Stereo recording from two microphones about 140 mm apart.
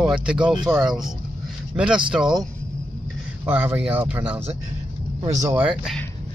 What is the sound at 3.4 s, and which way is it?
Speech, 15° right (ahead or behind).